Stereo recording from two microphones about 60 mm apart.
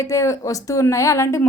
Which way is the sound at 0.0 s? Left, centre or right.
Left.